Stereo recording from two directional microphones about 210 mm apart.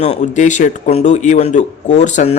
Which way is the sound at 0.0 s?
35° left (ahead or behind).